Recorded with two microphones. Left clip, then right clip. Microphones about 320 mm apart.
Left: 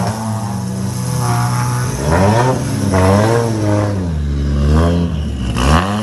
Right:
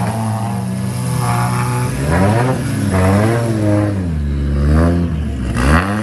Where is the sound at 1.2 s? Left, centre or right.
Right.